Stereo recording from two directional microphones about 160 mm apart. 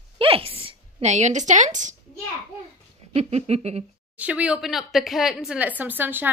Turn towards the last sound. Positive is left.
turn(degrees=-10)  # may be behind; listen again after turning